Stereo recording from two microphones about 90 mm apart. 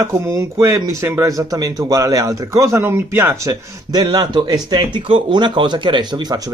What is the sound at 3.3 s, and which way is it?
Speech, 35° right (ahead or behind).